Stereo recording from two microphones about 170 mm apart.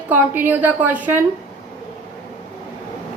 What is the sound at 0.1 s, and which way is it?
A woman's voice, 10° right (ahead or behind).